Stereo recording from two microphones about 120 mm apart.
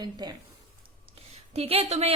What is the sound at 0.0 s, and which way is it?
Speech, 35° right (ahead or behind).